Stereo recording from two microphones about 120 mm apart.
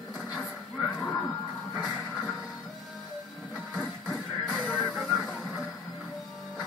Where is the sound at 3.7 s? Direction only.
Centre (ahead or behind).